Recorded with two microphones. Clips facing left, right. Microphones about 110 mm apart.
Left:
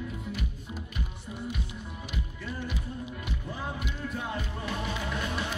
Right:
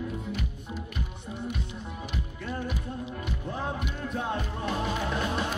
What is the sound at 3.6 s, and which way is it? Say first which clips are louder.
Music: right 3 dB; 35° right (ahead or behind).